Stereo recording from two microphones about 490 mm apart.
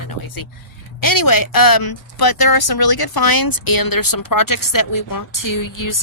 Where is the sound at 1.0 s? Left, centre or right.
Left.